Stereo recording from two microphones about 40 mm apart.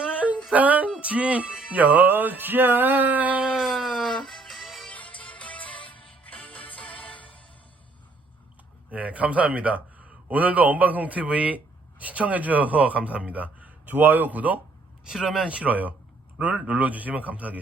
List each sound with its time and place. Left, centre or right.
0.5 s speech: right
0.9 s music: right
3.6 s a sound: centre
4.0 s music: centre
4.9 s music: left
8.9 s a man's voice: right
15.0 s speech: centre
15.4 s speech: right